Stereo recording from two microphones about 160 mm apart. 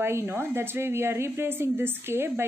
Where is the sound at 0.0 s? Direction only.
15° right (ahead or behind).